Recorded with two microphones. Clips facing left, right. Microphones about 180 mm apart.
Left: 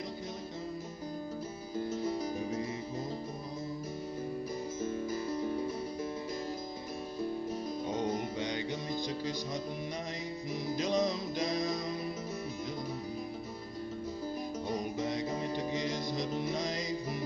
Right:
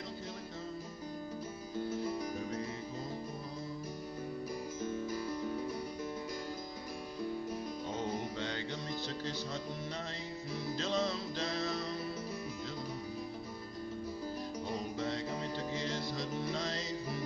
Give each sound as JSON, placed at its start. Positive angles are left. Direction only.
{"t": 5.1, "sound": "music", "side_deg": 25}
{"t": 7.9, "sound": "music", "side_deg": 15}
{"t": 10.5, "sound": "music", "side_deg": 15}
{"t": 15.0, "sound": "music", "side_deg": 15}